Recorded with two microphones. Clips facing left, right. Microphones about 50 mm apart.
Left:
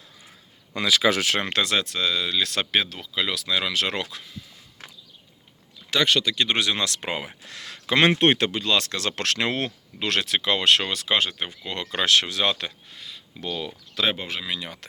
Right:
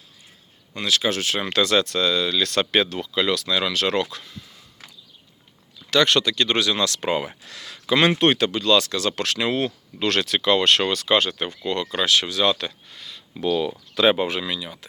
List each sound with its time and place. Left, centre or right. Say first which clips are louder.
1.0 s speech: left 5 dB; left
1.5 s speech: right 4 dB; left
2.7 s speech: right 2 dB; centre
6.1 s speech: right 2 dB; centre
6.3 s speech: right 2 dB; left
7.4 s speech: right 3 dB; left
8.2 s speech: right 1 dB; left
8.8 s speech: right 3 dB; left
9.6 s speech: right 4 dB; centre
11.8 s speech: left 1 dB; left
12.9 s a sound: right 1 dB; centre
13.3 s speech: right 9 dB; centre